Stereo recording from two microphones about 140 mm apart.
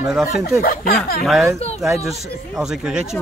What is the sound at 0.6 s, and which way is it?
Speech, 90° left.